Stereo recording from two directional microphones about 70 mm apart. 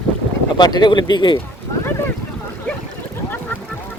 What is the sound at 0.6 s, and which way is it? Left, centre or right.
Speech, left.